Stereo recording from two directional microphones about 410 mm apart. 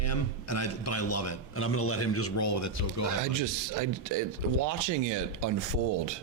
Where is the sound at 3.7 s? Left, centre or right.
Right.